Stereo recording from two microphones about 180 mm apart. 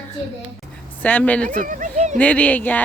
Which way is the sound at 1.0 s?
10° left (ahead or behind).